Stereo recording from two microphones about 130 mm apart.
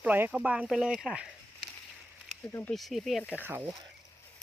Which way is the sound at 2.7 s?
Centre (ahead or behind).